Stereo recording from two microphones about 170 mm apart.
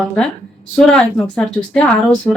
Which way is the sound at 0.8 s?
5° left (ahead or behind).